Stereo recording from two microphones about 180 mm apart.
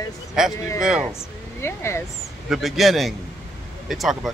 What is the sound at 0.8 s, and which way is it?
Speech, 5° right (ahead or behind).